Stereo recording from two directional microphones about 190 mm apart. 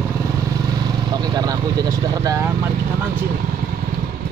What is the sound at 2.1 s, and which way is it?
Speech, 20° right (ahead or behind).